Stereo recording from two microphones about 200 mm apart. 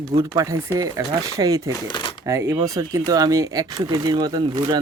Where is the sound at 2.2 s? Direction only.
15° right (ahead or behind).